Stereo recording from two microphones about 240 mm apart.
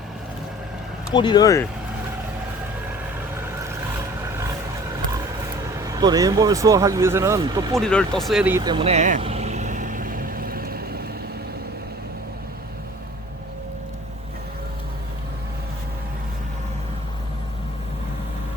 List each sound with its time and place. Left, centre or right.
1.1 s speech: centre
5.8 s speech: centre
7.8 s vehicle: centre; by 11.0 s right